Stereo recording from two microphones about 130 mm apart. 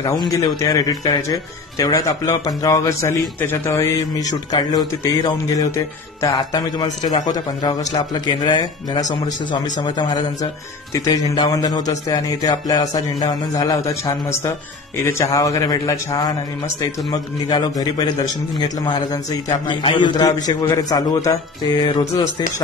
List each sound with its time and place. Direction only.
0.3 s speech: 25° left (ahead or behind)
7.3 s speech: 30° left (ahead or behind)